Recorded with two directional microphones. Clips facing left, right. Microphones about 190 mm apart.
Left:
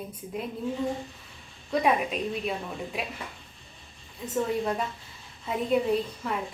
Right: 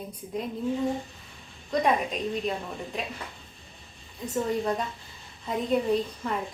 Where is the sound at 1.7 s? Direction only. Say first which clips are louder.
Even; 5° left (ahead or behind).